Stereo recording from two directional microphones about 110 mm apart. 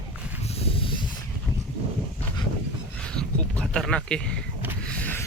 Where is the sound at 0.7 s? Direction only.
55° left (ahead or behind).